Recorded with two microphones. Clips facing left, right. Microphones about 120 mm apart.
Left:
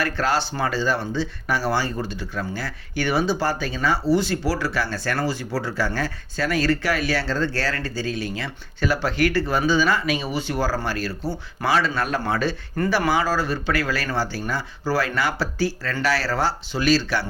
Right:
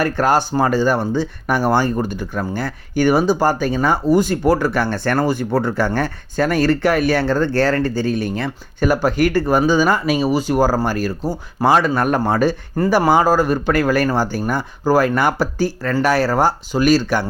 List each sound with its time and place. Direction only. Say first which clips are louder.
0.0 s speech: right 6 dB; 50° right (ahead or behind)